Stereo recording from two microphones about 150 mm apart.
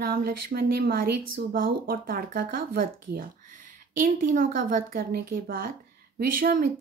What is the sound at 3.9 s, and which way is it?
A woman's voice, 65° right (ahead or behind).